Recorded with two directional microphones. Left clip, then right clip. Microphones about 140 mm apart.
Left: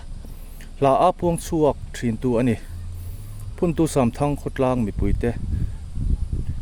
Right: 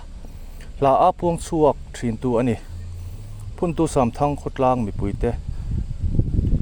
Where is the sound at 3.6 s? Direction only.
40° left (ahead or behind).